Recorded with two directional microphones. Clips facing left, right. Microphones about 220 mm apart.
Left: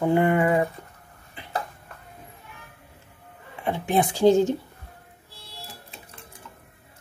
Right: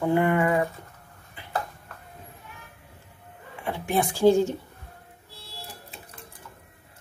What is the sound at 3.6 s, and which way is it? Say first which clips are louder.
Speech: left 3 dB; 20° left (ahead or behind).